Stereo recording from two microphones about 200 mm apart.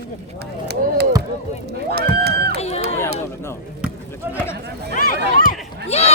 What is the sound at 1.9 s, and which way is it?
Music, 55° right (ahead or behind).